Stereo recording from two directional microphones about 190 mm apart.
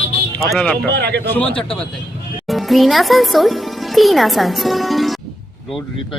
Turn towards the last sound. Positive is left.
turn(degrees=0)  # may be behind; listen again after turning